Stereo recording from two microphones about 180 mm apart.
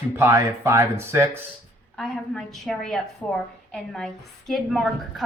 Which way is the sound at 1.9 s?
Centre (ahead or behind).